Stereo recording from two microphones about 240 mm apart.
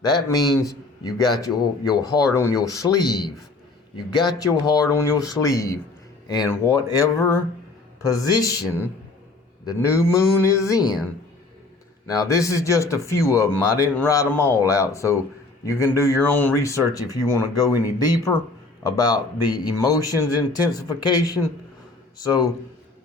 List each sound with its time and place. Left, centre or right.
0.3 s speech: centre
12.0 s speech: centre